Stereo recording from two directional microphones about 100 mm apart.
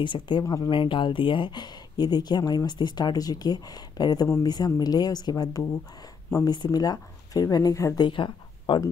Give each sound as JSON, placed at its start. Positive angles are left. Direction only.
{"t": 0.0, "sound": "speech", "side_deg": 55}
{"t": 8.0, "sound": "speech", "side_deg": 55}